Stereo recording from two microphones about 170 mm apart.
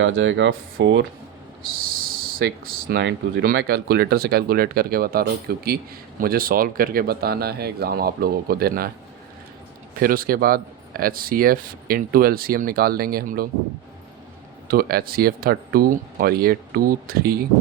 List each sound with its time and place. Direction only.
0.0 s speech: 90° right
2.4 s speech: 70° right (ahead or behind)
10.0 s speech: 60° right (ahead or behind)
14.7 s speech: 60° right (ahead or behind)